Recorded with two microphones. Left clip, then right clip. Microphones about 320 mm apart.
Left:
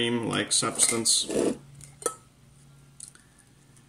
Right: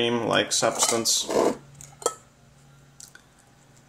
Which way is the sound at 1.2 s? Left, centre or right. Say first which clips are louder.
Right 5 dB; right.